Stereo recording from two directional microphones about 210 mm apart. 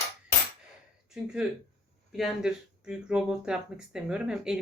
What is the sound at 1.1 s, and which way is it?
Speech, 5° right (ahead or behind).